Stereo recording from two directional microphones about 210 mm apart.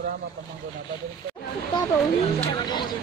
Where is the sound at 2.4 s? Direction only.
20° left (ahead or behind).